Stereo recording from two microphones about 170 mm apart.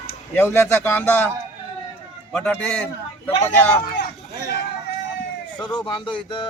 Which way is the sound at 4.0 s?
75° left (ahead or behind).